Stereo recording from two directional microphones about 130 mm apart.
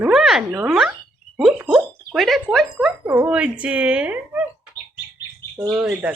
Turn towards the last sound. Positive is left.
turn(degrees=-10)  # may be behind; listen again after turning